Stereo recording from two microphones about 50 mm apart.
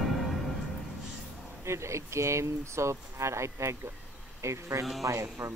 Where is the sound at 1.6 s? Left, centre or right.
Right.